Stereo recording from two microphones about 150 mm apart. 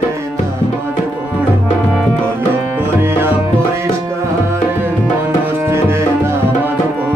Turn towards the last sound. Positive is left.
turn(degrees=-15)  # may be behind; listen again after turning